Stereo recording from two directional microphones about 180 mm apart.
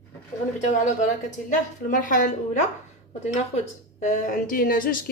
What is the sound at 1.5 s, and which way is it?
Speech, 45° left (ahead or behind).